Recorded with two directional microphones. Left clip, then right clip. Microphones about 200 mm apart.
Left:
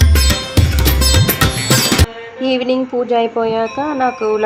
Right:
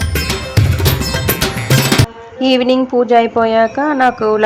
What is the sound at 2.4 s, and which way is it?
Speech, 20° right (ahead or behind).